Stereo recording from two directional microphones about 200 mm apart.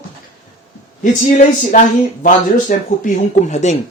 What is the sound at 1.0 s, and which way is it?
Speech, 40° left (ahead or behind).